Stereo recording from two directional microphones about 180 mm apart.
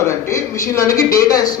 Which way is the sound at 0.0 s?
15° left (ahead or behind).